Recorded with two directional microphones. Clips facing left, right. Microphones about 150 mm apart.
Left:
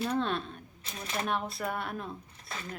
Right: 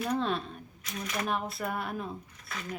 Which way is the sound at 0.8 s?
30° left (ahead or behind).